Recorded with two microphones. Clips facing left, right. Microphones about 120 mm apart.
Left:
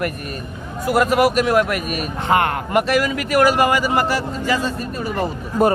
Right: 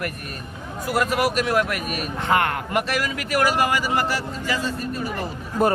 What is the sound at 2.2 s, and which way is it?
Speech, 25° left (ahead or behind).